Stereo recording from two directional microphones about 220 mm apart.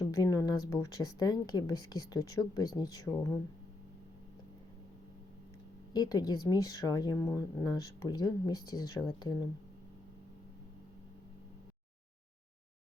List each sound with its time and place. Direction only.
0.1 s speech: 15° left (ahead or behind)
5.9 s speech: 15° left (ahead or behind)